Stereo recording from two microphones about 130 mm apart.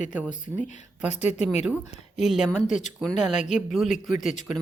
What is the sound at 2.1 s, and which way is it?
Speech, 5° right (ahead or behind).